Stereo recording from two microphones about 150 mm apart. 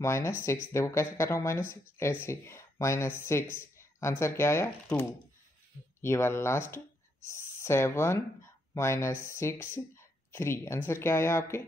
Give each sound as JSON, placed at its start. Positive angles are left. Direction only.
{"t": 0.0, "sound": "speech", "side_deg": 20}